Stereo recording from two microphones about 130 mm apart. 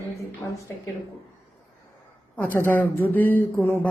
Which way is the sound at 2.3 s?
15° left (ahead or behind).